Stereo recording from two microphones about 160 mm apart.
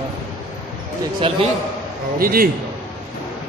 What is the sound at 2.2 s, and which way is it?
Speech, 65° right (ahead or behind).